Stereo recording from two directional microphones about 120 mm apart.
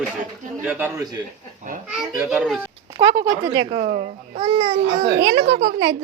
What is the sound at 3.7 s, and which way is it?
Speech, 80° right.